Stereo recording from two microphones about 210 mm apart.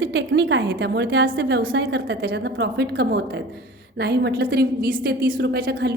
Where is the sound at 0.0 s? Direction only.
55° right (ahead or behind).